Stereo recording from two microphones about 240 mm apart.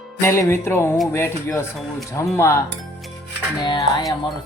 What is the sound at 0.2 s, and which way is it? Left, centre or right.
Speech, centre.